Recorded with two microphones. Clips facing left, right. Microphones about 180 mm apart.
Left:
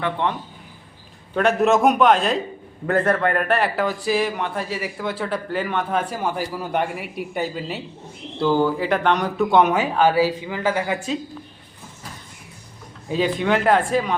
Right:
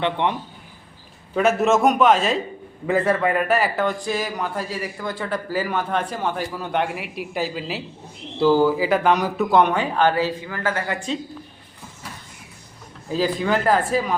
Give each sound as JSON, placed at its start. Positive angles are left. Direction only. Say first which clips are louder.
{"t": 0.0, "sound": "a man's voice", "louder": "right 1 dB", "side_deg": -20}
{"t": 1.4, "sound": "a man's voice", "louder": "even", "side_deg": -5}
{"t": 13.1, "sound": "a man's voice", "louder": "left 1 dB", "side_deg": 0}